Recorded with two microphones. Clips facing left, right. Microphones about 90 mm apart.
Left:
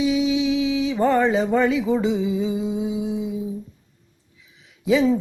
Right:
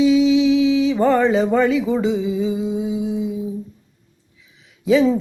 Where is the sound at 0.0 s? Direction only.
15° left (ahead or behind).